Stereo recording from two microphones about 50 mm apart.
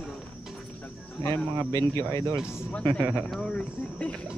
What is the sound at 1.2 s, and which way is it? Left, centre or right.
Speech, left.